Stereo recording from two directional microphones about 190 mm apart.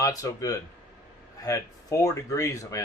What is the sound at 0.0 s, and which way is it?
Speech, 20° left (ahead or behind).